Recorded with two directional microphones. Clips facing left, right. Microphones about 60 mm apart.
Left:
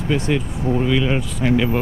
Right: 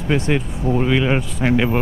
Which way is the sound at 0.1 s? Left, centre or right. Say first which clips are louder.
Right 2 dB; right.